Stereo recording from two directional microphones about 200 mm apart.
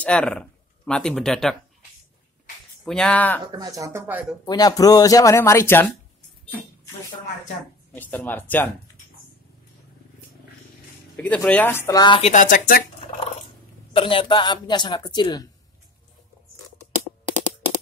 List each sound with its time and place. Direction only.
0.0 s speech: 5° left (ahead or behind)
2.8 s speech: 5° left (ahead or behind)
3.5 s speech: 20° right (ahead or behind)
4.5 s speech: 20° left (ahead or behind)
7.9 s speech: 10° left (ahead or behind)
11.1 s speech: 5° left (ahead or behind); by 12.8 s 45° left (ahead or behind)
13.9 s a woman's voice: 25° left (ahead or behind)